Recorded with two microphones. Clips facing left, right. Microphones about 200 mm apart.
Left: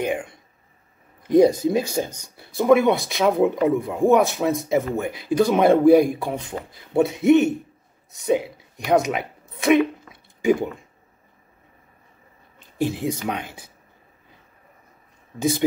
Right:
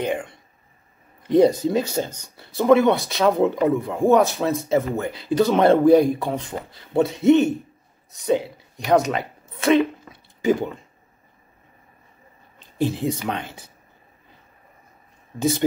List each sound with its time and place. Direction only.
0.0 s a woman's voice: 10° left (ahead or behind)
12.5 s speech: 10° left (ahead or behind)